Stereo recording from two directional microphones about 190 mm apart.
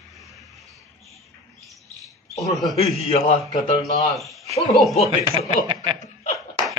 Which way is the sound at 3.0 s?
35° left (ahead or behind).